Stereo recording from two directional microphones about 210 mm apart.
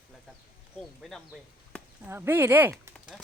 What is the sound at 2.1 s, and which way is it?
Speech, 10° right (ahead or behind).